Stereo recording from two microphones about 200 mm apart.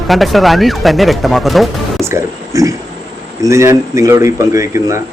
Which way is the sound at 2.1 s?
15° right (ahead or behind).